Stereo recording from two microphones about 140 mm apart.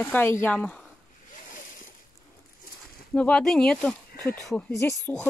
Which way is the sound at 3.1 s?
5° left (ahead or behind).